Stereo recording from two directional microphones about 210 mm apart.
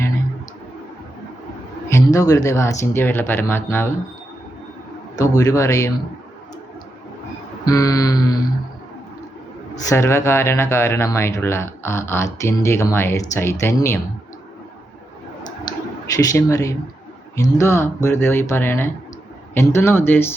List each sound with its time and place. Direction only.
1.9 s speech: 15° left (ahead or behind)
5.4 s speech: 15° left (ahead or behind)
7.6 s speech: 15° left (ahead or behind)
9.9 s speech: 15° left (ahead or behind)
16.1 s speech: 15° left (ahead or behind)